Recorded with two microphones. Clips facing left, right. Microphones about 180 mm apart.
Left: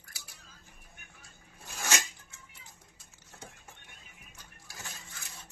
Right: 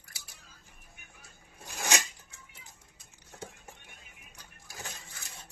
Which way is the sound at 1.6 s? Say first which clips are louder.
Right 2 dB; 15° right (ahead or behind).